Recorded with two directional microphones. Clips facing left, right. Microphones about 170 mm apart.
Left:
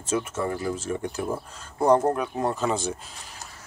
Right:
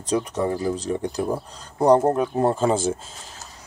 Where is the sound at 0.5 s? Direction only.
35° right (ahead or behind).